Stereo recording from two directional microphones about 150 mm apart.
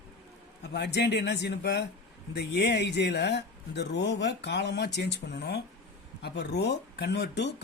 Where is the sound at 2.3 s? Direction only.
90° left.